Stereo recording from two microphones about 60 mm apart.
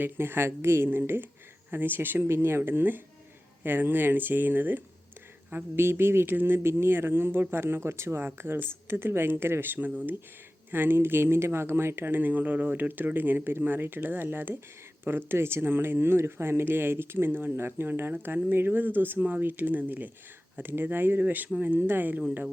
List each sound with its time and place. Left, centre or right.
0.0 s speech: right
10.7 s speech: right